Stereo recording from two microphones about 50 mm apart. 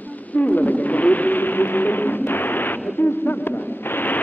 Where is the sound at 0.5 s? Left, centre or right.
Left.